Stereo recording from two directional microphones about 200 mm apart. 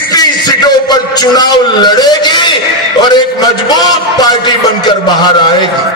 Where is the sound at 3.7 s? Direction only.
20° left (ahead or behind).